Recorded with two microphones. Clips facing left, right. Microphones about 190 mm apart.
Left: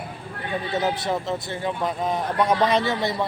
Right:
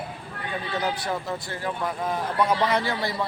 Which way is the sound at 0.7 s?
20° left (ahead or behind).